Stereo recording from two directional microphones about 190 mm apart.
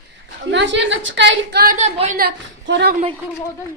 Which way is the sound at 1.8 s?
35° right (ahead or behind).